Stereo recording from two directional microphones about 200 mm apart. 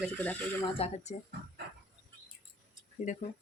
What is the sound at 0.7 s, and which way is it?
Speech, 30° left (ahead or behind).